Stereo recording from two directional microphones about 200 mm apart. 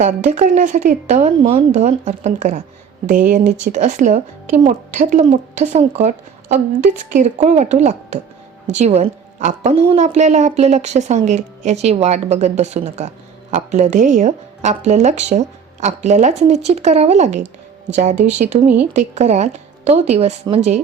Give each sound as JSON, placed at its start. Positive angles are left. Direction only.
{"t": 0.0, "sound": "a woman's voice", "side_deg": -40}